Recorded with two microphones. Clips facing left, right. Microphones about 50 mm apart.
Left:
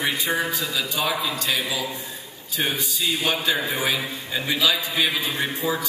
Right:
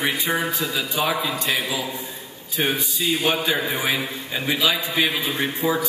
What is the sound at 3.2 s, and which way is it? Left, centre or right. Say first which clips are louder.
A man's voice: right 1 dB; centre.